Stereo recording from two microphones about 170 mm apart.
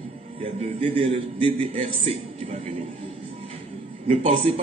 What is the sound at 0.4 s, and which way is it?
A man's voice, 35° right (ahead or behind).